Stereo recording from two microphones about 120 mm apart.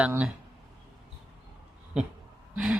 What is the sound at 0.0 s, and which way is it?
Speech, 10° right (ahead or behind).